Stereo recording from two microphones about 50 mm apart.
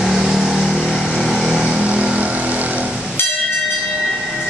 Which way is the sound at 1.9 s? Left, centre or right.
Right.